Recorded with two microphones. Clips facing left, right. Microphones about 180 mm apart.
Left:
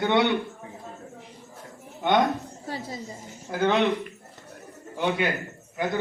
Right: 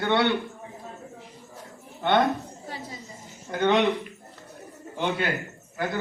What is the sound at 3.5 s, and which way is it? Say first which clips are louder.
Speech: right 1 dB; 5° left (ahead or behind).